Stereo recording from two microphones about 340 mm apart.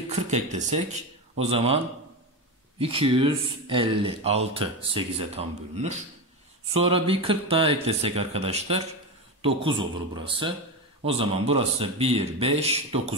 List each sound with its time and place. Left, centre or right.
0.1 s speech: right
2.8 s speech: centre